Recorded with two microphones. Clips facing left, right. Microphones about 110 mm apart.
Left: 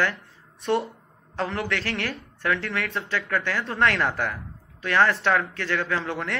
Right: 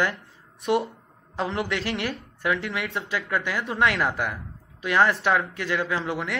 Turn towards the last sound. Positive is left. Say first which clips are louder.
# even
turn(degrees=-10)  # may be behind; listen again after turning